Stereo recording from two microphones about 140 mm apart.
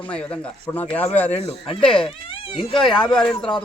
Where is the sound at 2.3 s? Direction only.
40° left (ahead or behind).